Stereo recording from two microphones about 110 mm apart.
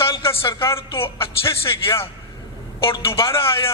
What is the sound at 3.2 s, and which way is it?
Speech, 25° left (ahead or behind).